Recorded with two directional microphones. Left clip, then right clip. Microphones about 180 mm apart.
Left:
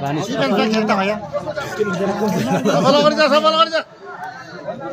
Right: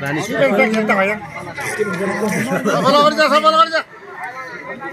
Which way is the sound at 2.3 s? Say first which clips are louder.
Even; 25° left (ahead or behind).